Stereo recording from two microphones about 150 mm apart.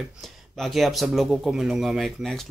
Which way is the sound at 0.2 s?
Centre (ahead or behind).